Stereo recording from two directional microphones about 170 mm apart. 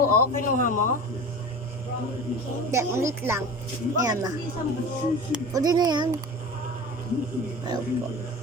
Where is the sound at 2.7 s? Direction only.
15° right (ahead or behind).